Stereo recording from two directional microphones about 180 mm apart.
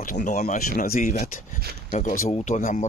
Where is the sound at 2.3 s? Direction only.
40° left (ahead or behind).